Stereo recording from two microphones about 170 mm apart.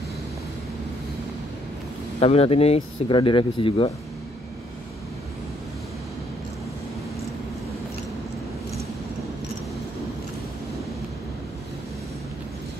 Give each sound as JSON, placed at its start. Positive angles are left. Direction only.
{"t": 2.1, "sound": "speech", "side_deg": 35}